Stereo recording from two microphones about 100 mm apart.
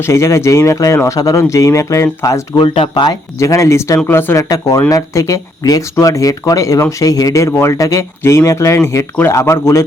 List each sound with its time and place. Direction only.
0.0 s speech: 30° left (ahead or behind)
2.6 s speech: 70° left (ahead or behind)
2.9 s speech: 45° left (ahead or behind)
3.3 s speech: 30° left (ahead or behind)
4.4 s speech: 35° left (ahead or behind)